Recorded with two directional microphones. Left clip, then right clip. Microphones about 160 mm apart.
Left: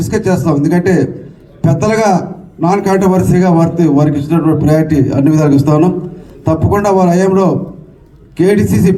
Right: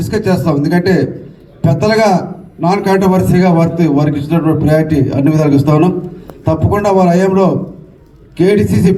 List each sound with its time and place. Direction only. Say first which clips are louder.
0.1 s a man's voice: even; 20° left (ahead or behind)